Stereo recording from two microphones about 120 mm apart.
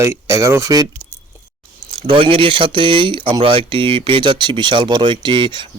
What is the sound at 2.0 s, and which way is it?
Speech, 50° right (ahead or behind).